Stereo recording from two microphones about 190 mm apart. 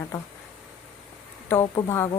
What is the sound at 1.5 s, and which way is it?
Speech, 15° left (ahead or behind).